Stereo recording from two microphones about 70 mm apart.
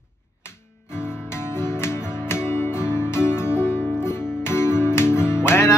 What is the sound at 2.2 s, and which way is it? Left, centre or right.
Music, left.